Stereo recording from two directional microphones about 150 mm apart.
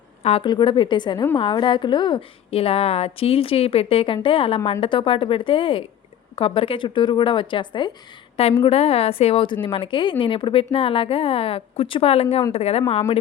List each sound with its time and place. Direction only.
0.2 s a woman's voice: 45° left (ahead or behind)
0.4 s a woman's voice: 30° left (ahead or behind)
8.6 s a woman's voice: 40° left (ahead or behind)